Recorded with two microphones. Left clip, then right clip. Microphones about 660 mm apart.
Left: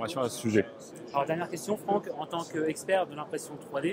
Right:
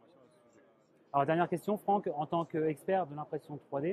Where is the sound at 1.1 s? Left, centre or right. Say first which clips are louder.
Even; right.